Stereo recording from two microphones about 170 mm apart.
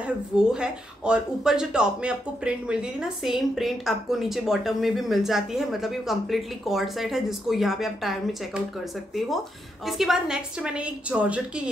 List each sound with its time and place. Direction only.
0.0 s speech: 5° right (ahead or behind)
9.8 s speech: centre (ahead or behind)